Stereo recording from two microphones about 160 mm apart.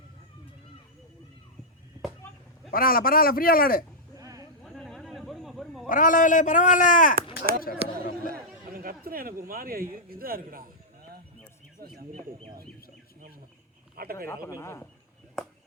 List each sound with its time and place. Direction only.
2.7 s a man's voice: 65° left (ahead or behind)
4.2 s a sound: 20° right (ahead or behind)
4.6 s a sound: centre (ahead or behind)
5.9 s a man's voice: 55° left (ahead or behind)
8.3 s chatter: 65° right (ahead or behind)
9.5 s speech: 65° right (ahead or behind)
13.9 s speech: 70° right (ahead or behind)
14.3 s speech: 20° left (ahead or behind)